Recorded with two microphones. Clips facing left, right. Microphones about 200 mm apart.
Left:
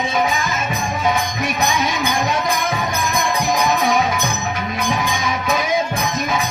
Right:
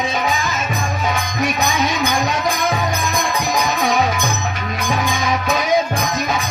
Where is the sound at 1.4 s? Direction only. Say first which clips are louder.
Right 1 dB; 55° left (ahead or behind).